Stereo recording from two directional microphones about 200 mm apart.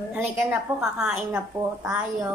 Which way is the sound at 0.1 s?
5° right (ahead or behind).